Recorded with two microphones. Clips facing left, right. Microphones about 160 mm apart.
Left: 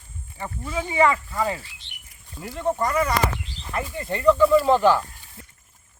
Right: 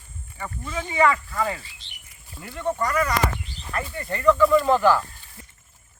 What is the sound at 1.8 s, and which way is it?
Squawk, 60° left (ahead or behind).